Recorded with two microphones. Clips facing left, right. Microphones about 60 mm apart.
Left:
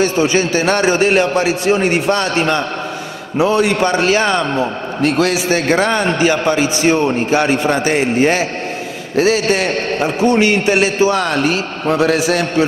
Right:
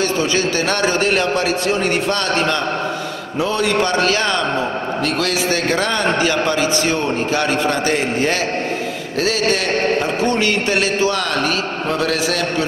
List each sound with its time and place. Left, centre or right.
0.0 s a man's voice: centre